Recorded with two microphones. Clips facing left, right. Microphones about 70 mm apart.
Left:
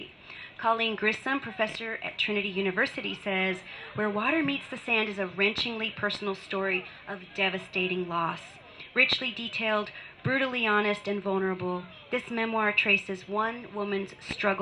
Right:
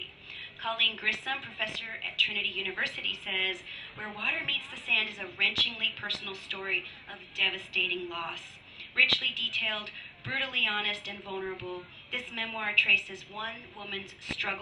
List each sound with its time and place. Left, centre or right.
0.6 s a woman's voice: left
3.9 s a woman's voice: left
4.2 s a woman's voice: left
11.3 s a woman's voice: left